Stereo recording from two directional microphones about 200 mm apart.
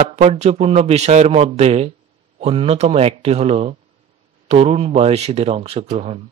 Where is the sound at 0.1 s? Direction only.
35° right (ahead or behind).